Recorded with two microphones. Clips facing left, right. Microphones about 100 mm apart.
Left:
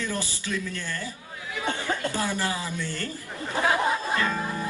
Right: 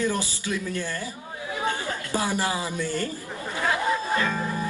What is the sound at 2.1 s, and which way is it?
Speech, 15° right (ahead or behind).